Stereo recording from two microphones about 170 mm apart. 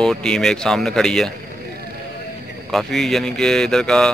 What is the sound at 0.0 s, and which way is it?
Speech, 5° left (ahead or behind).